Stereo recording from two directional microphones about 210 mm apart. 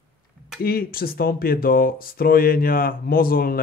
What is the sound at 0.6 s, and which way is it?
A man's voice, 45° left (ahead or behind).